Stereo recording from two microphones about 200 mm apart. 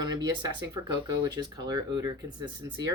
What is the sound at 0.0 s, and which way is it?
Speech, 20° right (ahead or behind).